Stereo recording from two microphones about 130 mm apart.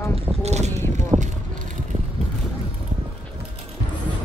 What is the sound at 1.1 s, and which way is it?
Speech, 40° right (ahead or behind).